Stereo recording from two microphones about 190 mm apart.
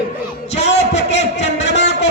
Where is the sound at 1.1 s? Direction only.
35° left (ahead or behind).